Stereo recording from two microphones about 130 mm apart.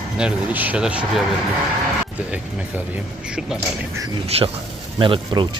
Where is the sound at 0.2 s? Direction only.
10° right (ahead or behind).